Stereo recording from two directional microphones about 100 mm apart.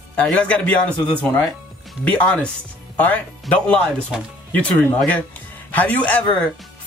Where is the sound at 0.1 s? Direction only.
10° left (ahead or behind).